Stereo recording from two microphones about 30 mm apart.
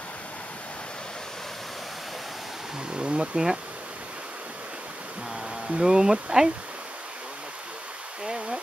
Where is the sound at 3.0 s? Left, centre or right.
Right.